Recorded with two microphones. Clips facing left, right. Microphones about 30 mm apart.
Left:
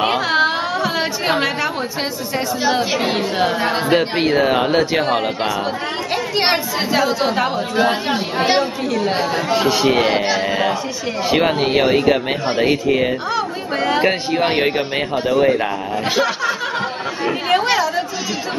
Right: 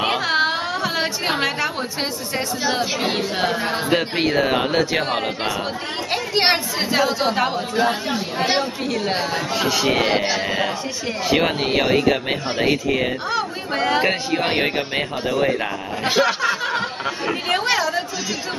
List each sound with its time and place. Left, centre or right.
0.0 s a sound: centre
2.6 s a man's voice: centre
7.9 s speech: left
8.5 s speech: centre
9.5 s speech: centre
17.5 s chatter: centre